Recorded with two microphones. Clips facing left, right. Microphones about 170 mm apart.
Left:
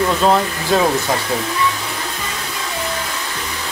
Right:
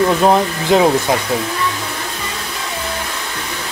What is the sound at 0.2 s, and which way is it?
Speech, 20° right (ahead or behind).